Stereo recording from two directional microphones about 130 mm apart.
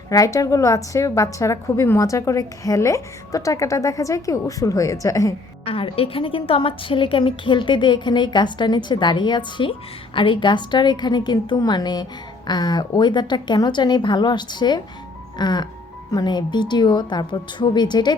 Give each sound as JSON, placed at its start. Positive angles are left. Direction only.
{"t": 0.1, "sound": "a woman's voice", "side_deg": 25}
{"t": 5.6, "sound": "a woman's voice", "side_deg": 45}